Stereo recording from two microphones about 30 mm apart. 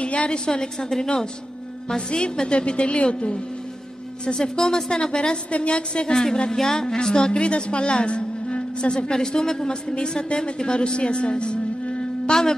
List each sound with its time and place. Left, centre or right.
0.0 s a sound: left
0.5 s a woman's voice: left
4.3 s a woman's voice: left
5.5 s a woman's voice: left
6.5 s a woman's voice: centre; by 11.6 s left
12.3 s a sound: centre